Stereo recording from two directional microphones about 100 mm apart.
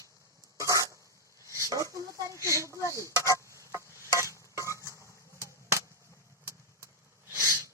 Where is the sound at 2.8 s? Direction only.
30° left (ahead or behind).